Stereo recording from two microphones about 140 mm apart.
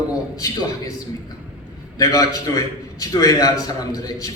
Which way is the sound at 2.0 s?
25° left (ahead or behind).